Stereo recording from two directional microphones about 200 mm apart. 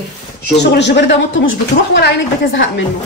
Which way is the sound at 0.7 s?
60° left (ahead or behind).